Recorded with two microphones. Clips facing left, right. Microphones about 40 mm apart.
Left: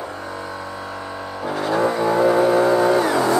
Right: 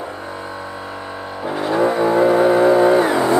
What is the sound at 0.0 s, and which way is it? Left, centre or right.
Vehicle, centre.